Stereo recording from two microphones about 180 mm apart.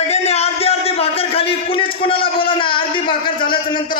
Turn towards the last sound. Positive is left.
turn(degrees=25)  # may be behind; listen again after turning